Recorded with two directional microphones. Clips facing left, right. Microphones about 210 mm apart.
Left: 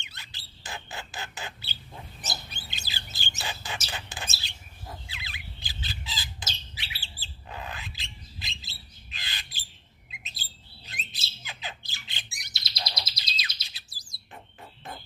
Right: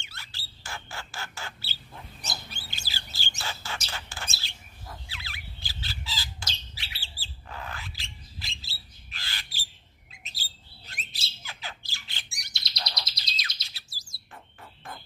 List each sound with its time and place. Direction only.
0.0 s bird: 20° left (ahead or behind)
4.4 s squawk: 20° left (ahead or behind)
7.0 s bird: 20° left (ahead or behind)
12.5 s bird: centre (ahead or behind)
13.7 s bird: 20° left (ahead or behind)